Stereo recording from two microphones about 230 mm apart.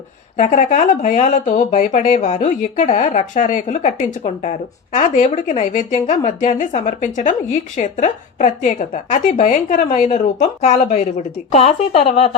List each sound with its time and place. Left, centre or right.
0.3 s a woman's voice: left